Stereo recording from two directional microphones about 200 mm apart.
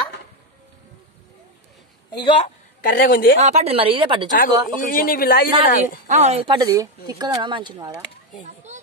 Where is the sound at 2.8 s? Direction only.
45° left (ahead or behind).